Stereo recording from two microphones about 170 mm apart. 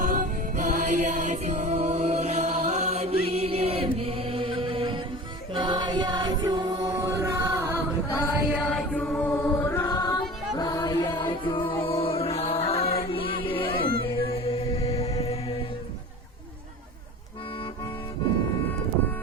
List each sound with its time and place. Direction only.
0.0 s music: 50° right (ahead or behind)
3.2 s chant: 35° right (ahead or behind)
5.5 s music: 25° right (ahead or behind)
8.4 s chant: 10° right (ahead or behind)
8.6 s choir: 5° left (ahead or behind)
10.6 s music: 25° left (ahead or behind)